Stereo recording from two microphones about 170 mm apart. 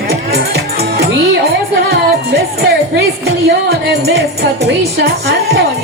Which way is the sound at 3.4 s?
70° right (ahead or behind).